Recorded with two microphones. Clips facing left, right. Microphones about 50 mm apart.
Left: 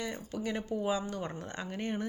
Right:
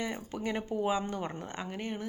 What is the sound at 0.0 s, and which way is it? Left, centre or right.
A woman's voice, centre.